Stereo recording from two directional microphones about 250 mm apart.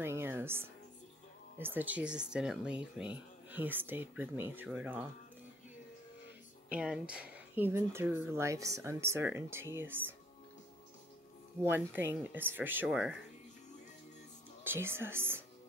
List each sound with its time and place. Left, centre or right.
0.0 s music: centre
1.6 s speech: centre
6.7 s speech: centre
11.6 s speech: centre
14.6 s speech: centre